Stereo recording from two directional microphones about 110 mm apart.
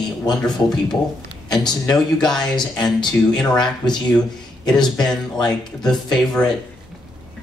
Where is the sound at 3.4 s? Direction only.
5° left (ahead or behind).